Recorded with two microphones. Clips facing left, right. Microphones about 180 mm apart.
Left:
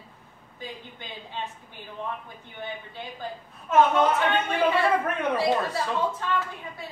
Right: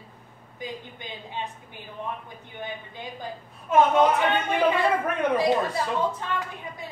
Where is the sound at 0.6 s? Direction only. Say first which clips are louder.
Right 3 dB; 15° right (ahead or behind).